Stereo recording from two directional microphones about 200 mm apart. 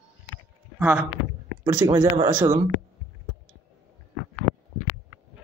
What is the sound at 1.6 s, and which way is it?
A man's voice, 20° right (ahead or behind).